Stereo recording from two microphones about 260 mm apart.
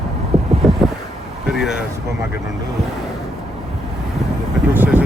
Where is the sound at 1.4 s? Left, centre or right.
Centre.